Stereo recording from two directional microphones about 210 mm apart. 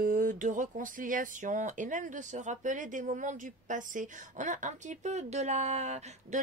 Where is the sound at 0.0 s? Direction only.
40° right (ahead or behind).